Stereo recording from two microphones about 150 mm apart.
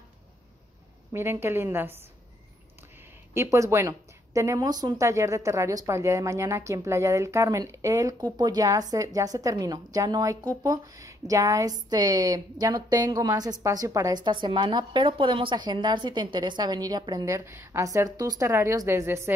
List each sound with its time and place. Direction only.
1.1 s a woman's voice: 15° right (ahead or behind)
3.3 s a woman's voice: 20° right (ahead or behind)